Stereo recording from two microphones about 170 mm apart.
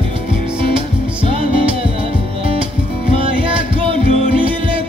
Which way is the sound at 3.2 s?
30° right (ahead or behind).